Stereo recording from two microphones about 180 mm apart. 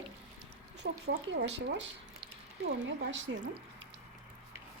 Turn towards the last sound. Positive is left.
turn(degrees=-90)